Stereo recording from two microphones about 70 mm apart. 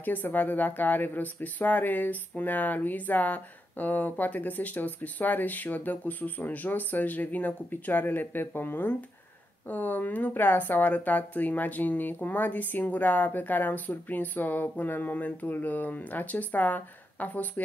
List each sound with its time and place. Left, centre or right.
0.0 s speech: left